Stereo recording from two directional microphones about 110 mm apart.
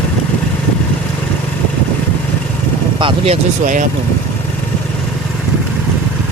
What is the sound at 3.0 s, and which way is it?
Vehicle, 55° right (ahead or behind).